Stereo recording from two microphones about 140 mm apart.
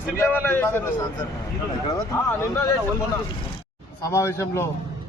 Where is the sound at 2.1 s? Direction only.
20° left (ahead or behind).